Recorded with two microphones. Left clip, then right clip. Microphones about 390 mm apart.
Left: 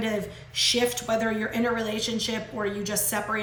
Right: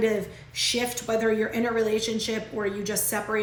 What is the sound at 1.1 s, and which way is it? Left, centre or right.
Speech, left.